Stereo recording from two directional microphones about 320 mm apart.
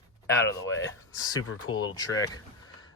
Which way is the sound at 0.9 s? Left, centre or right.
Centre.